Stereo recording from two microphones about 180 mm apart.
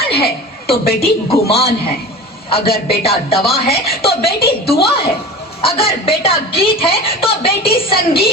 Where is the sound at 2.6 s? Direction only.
55° left (ahead or behind).